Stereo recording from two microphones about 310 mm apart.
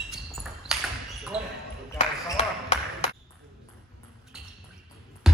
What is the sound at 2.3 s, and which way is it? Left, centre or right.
Basketball bounce, centre.